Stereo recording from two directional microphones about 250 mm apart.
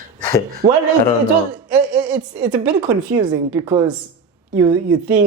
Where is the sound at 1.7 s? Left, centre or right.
Centre.